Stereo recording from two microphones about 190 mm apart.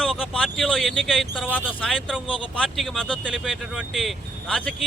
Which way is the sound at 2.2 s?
25° left (ahead or behind).